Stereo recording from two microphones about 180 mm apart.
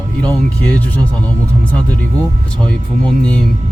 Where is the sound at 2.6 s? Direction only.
5° left (ahead or behind).